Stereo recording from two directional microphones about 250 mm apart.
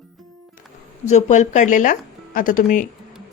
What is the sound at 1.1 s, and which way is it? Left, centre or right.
A woman's voice, left.